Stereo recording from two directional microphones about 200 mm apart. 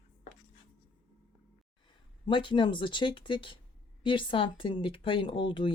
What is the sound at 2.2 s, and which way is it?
Speech, 25° left (ahead or behind).